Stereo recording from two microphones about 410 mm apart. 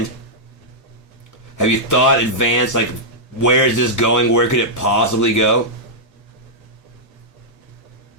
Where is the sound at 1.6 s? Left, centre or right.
Left.